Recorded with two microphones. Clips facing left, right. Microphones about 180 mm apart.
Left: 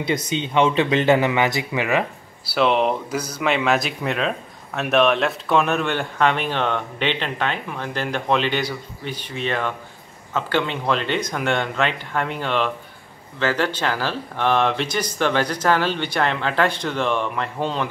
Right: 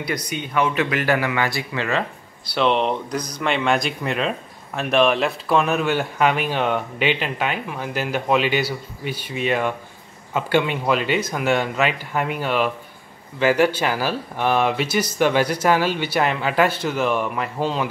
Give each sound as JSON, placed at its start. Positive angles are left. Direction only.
{"t": 0.0, "sound": "speech", "side_deg": 25}
{"t": 2.5, "sound": "speech", "side_deg": 5}